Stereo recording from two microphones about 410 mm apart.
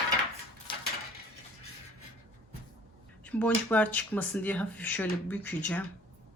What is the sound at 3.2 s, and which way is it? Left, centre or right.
Speech, centre.